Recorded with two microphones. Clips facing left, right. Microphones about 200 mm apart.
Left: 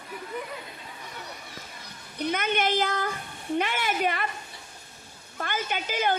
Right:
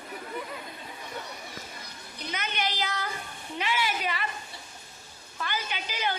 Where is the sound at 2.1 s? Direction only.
55° left (ahead or behind).